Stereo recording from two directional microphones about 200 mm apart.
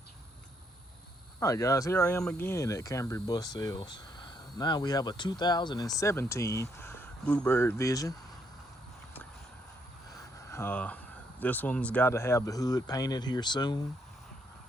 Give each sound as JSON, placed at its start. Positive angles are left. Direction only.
{"t": 1.4, "sound": "speech", "side_deg": 15}
{"t": 10.1, "sound": "speech", "side_deg": 15}